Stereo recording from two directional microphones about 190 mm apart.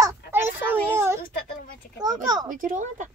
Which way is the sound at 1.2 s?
45° left (ahead or behind).